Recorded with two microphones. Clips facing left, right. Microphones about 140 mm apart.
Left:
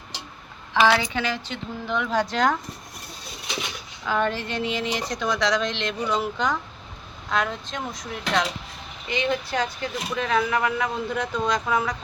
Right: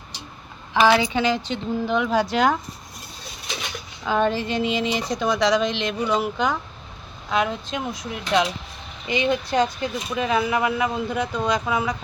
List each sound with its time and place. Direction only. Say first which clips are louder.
0.7 s speech: right 2 dB; 15° right (ahead or behind)
4.0 s speech: right 3 dB; 20° right (ahead or behind); by 11.9 s 5° right (ahead or behind)